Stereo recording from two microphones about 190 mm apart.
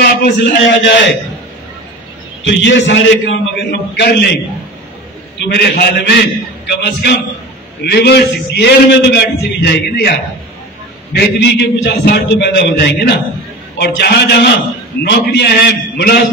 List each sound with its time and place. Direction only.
0.0 s a man's voice: 60° left (ahead or behind)
2.4 s a man's voice: 70° left (ahead or behind)
3.9 s a man's voice: 60° left (ahead or behind)
5.4 s a man's voice: 60° left (ahead or behind)
11.1 s a man's voice: 60° left (ahead or behind)